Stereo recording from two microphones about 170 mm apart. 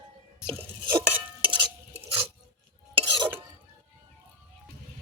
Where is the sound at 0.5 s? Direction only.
10° right (ahead or behind).